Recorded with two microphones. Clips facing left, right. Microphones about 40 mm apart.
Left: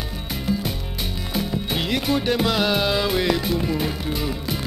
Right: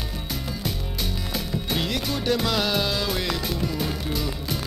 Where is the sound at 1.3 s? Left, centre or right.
Centre.